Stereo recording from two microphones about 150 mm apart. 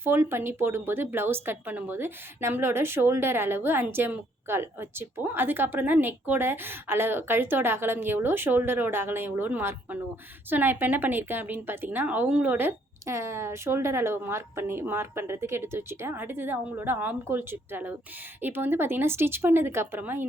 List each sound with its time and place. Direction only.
0.0 s a woman's voice: 15° right (ahead or behind)